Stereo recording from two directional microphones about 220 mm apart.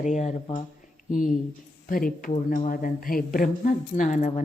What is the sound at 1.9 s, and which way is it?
Speech, 40° left (ahead or behind).